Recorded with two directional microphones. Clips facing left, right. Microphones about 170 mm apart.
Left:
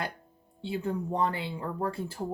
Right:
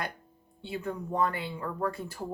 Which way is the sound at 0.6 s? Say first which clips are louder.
Left 3 dB; 30° left (ahead or behind).